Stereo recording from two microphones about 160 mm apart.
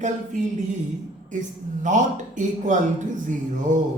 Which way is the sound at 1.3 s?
50° right (ahead or behind).